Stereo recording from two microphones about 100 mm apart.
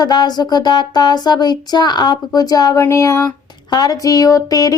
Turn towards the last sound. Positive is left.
turn(degrees=35)  # may be behind; listen again after turning